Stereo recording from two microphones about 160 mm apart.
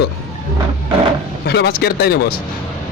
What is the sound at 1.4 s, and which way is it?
Speech, 85° left.